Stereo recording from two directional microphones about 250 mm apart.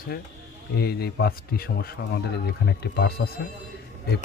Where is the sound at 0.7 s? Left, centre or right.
Left.